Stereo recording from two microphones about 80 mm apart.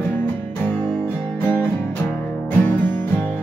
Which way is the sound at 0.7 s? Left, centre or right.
Centre.